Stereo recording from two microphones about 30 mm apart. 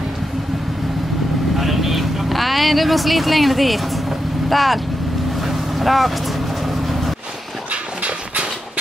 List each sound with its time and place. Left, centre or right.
1.6 s vehicle: centre
4.5 s speech: centre
5.4 s boat: centre
6.6 s vehicle: centre
7.7 s dog: right